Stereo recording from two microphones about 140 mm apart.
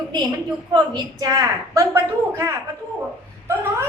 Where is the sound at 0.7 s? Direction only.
30° right (ahead or behind).